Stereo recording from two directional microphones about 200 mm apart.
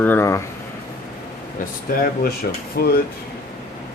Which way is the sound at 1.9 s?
45° left (ahead or behind).